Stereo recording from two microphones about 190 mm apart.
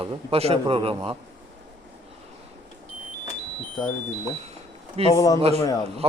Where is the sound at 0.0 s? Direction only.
30° right (ahead or behind).